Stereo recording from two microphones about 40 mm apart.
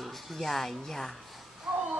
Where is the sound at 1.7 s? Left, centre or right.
Centre.